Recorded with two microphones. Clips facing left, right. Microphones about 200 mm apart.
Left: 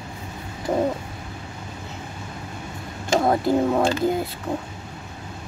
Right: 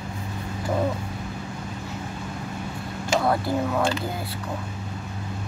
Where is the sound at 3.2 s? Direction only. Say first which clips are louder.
Left 4 dB; 20° left (ahead or behind).